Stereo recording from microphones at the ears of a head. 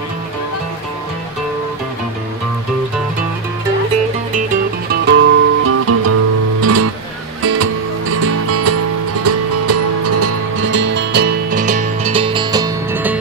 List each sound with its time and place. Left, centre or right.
3.9 s music: right